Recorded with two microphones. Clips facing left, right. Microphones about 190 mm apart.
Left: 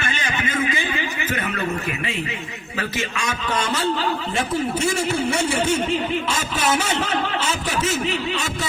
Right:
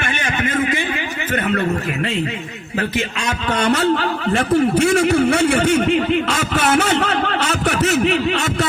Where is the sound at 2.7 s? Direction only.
60° right (ahead or behind).